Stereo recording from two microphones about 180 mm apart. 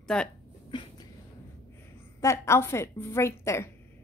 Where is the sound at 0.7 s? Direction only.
25° left (ahead or behind).